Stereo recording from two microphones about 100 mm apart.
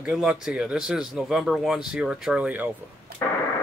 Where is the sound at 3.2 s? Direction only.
25° left (ahead or behind).